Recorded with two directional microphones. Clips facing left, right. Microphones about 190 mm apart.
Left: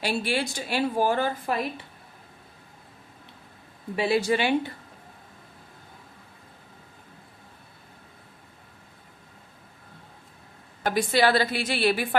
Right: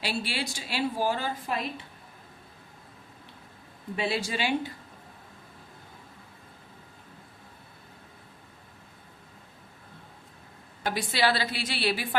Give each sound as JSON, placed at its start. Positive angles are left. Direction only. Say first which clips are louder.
{"t": 0.0, "sound": "a woman's voice", "louder": "left 5 dB", "side_deg": 50}
{"t": 3.9, "sound": "speech", "louder": "left 7 dB", "side_deg": 60}
{"t": 10.8, "sound": "a woman's voice", "louder": "left 5 dB", "side_deg": 50}